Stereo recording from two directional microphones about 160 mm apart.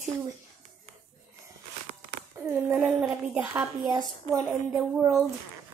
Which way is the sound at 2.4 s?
5° right (ahead or behind).